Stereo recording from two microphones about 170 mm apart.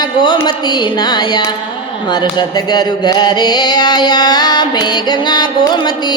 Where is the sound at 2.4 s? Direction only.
25° left (ahead or behind).